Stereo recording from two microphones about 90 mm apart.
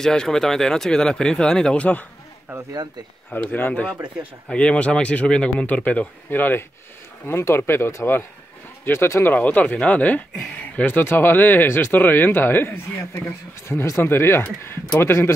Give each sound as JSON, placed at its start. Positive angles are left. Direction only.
{"t": 0.0, "sound": "speech", "side_deg": 5}
{"t": 3.3, "sound": "speech", "side_deg": 20}